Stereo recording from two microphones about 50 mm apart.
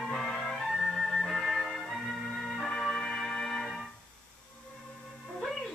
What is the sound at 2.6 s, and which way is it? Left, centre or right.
Music, centre.